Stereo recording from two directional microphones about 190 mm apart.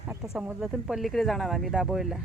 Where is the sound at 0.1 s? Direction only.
10° right (ahead or behind).